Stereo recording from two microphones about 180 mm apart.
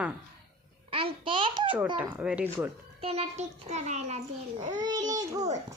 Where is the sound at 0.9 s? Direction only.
30° right (ahead or behind).